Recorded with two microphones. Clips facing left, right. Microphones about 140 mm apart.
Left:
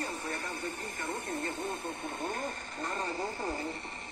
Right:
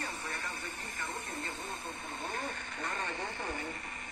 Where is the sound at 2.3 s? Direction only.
40° left (ahead or behind).